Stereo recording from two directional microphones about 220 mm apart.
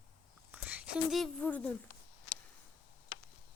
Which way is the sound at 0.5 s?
5° right (ahead or behind).